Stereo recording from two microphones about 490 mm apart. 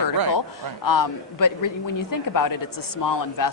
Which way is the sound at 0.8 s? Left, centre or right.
Left.